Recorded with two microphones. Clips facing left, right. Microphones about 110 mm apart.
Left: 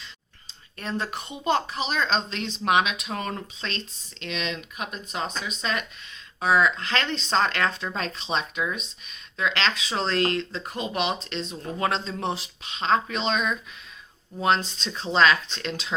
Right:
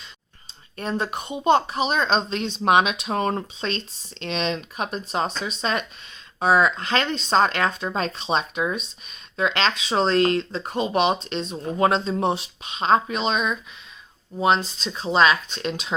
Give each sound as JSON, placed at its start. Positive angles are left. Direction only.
{"t": 0.8, "sound": "speech", "side_deg": -25}
{"t": 11.9, "sound": "speech", "side_deg": -15}